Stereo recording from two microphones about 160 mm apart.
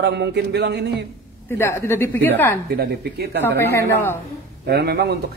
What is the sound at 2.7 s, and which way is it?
Speech, 75° right (ahead or behind).